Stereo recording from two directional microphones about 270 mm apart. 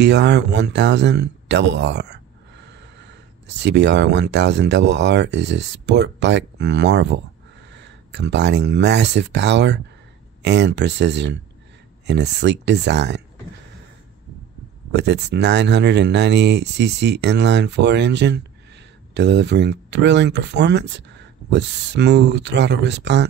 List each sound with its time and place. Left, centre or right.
0.0 s speech: right
14.9 s speech: right